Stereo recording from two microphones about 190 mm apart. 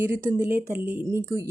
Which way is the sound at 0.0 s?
10° right (ahead or behind).